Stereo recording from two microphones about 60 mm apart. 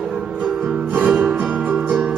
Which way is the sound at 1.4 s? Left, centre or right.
Centre.